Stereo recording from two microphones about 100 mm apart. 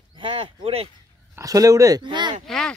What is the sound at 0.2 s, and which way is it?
Speech, 65° right (ahead or behind).